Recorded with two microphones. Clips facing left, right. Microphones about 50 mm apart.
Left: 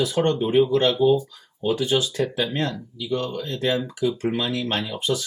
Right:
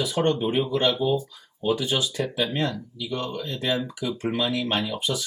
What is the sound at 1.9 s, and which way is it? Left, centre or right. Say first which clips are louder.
Speech: left 3 dB; centre.